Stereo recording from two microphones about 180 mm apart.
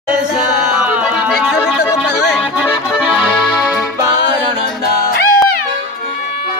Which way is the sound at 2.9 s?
Centre (ahead or behind).